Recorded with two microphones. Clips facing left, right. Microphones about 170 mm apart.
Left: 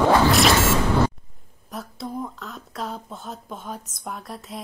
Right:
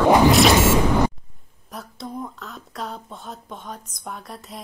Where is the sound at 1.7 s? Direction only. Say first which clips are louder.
Left 2 dB; centre (ahead or behind).